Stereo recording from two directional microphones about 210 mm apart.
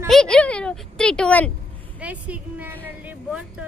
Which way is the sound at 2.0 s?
5° right (ahead or behind).